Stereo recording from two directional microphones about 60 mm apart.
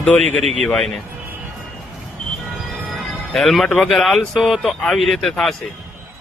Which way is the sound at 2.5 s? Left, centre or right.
Centre.